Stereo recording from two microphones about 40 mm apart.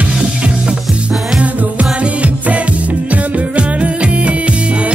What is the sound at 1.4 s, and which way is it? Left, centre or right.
Music, right.